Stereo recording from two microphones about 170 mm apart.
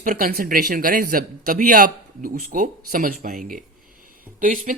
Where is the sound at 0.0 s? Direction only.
55° right (ahead or behind).